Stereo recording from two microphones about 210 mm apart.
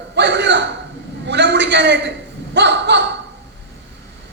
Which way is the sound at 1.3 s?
55° right (ahead or behind).